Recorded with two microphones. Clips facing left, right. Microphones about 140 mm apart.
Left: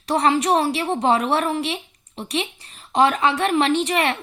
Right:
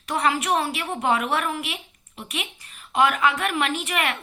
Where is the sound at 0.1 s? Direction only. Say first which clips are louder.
Left 5 dB; 35° left (ahead or behind).